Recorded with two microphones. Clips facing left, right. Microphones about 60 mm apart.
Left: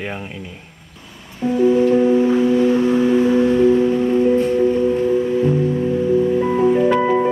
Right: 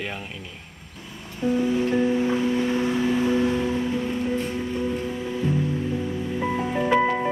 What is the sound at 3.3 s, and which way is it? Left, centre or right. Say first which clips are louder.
Music: left 9 dB; left.